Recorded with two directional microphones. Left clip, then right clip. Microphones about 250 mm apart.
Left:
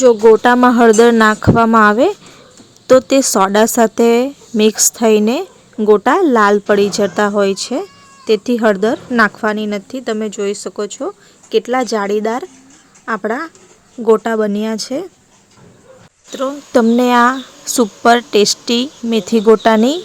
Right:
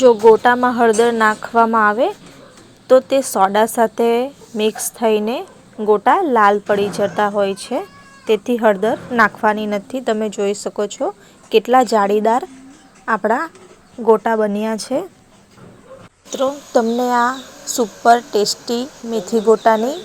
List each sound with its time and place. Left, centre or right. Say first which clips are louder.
0.0 s a woman's voice: left 2 dB; left
16.3 s a woman's voice: right 1 dB; centre
17.1 s a woman's voice: left 5 dB; left